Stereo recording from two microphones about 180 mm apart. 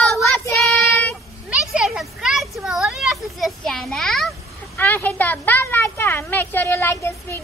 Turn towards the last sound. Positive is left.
turn(degrees=15)  # may be behind; listen again after turning